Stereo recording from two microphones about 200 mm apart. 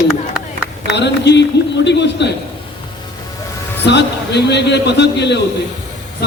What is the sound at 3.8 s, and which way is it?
A man's voice, 60° left (ahead or behind).